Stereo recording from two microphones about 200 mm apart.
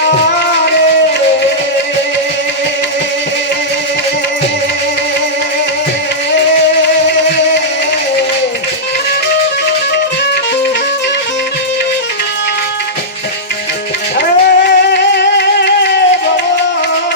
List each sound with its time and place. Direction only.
14.2 s singing: 55° left (ahead or behind)